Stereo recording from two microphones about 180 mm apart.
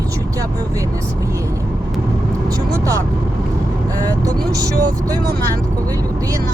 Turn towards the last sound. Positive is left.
turn(degrees=-20)  # may be behind; listen again after turning